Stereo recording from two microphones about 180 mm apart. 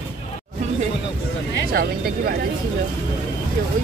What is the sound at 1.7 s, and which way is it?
Speech, 60° right (ahead or behind).